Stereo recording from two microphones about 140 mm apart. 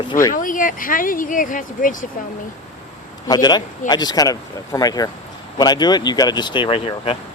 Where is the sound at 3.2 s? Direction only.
30° left (ahead or behind).